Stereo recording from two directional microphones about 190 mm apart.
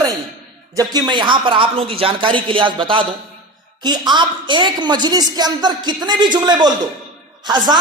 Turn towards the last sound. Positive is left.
turn(degrees=-20)  # may be behind; listen again after turning